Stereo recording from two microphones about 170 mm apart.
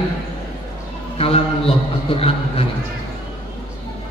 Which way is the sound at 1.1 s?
35° left (ahead or behind).